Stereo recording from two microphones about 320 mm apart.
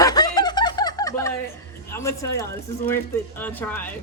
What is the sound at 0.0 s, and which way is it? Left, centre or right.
Snicker, centre.